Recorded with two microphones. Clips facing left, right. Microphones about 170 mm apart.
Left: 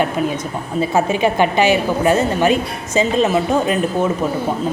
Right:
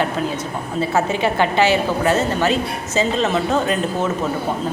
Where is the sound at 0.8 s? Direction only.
15° left (ahead or behind).